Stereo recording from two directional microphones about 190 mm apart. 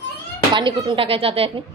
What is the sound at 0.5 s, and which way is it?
Speech, 25° right (ahead or behind).